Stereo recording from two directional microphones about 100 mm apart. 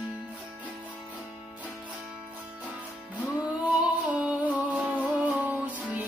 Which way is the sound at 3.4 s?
15° right (ahead or behind).